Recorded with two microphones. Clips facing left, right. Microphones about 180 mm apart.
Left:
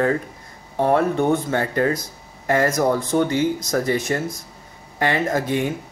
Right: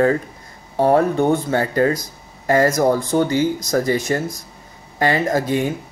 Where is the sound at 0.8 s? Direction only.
35° right (ahead or behind).